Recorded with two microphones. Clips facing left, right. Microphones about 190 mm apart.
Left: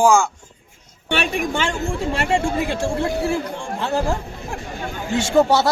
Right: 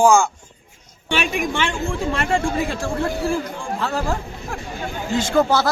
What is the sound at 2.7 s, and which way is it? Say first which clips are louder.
Speech: left 2 dB; 25° left (ahead or behind).